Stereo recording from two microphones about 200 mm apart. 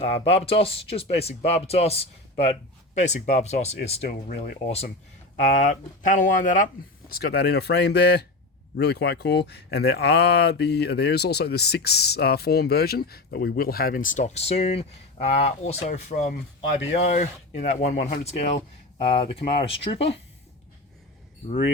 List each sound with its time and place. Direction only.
0.0 s speech: 30° left (ahead or behind)
5.5 s speech: 40° left (ahead or behind)
16.6 s speech: 35° left (ahead or behind)